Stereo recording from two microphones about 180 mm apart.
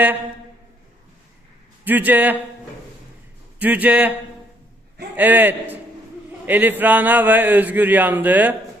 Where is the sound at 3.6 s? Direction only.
10° right (ahead or behind).